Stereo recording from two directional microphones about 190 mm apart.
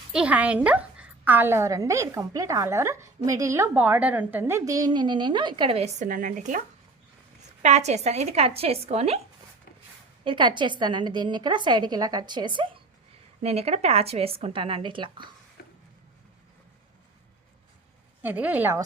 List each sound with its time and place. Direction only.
0.1 s a woman's voice: 5° right (ahead or behind); by 6.6 s 45° right (ahead or behind)
7.6 s a woman's voice: 35° right (ahead or behind)
10.2 s a woman's voice: 25° right (ahead or behind)
15.6 s a sound: 55° left (ahead or behind)
18.2 s a woman's voice: 10° right (ahead or behind)